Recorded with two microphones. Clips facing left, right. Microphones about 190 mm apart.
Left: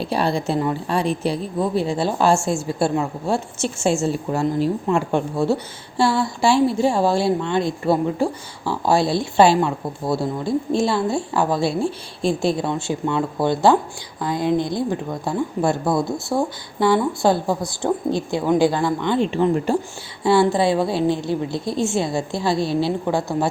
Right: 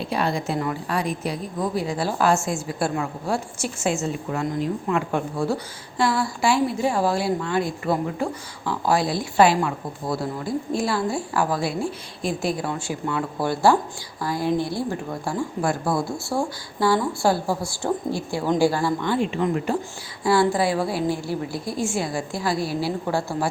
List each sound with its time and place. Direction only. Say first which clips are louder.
0.0 s a woman's voice: left 3 dB; 30° left (ahead or behind)